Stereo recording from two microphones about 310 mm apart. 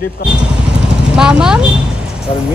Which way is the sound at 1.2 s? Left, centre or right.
Centre.